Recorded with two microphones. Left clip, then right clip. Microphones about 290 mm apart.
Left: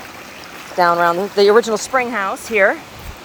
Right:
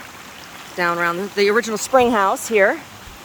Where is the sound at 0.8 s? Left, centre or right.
Centre.